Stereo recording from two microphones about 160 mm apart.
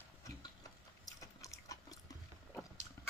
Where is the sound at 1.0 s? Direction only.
20° left (ahead or behind).